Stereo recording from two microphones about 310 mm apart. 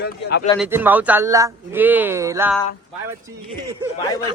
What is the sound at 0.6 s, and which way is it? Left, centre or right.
Speech, centre.